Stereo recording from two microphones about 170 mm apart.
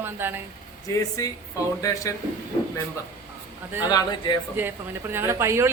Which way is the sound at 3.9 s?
25° left (ahead or behind).